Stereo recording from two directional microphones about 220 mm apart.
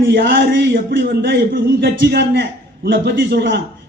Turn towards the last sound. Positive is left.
turn(degrees=-45)  # may be behind; listen again after turning